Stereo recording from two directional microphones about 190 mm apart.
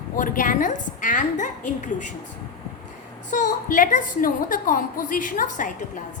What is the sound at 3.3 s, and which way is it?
A woman's voice, 40° left (ahead or behind).